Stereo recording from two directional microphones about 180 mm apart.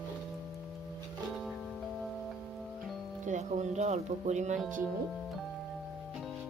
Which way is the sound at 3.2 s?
40° right (ahead or behind).